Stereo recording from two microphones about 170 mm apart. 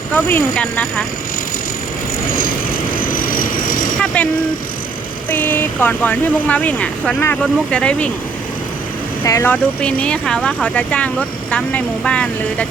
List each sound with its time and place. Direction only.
0.1 s speech: 10° left (ahead or behind)
3.0 s vehicle: 55° left (ahead or behind)
3.9 s vehicle: 5° left (ahead or behind)
5.3 s speech: 10° left (ahead or behind)
9.2 s speech: 15° left (ahead or behind)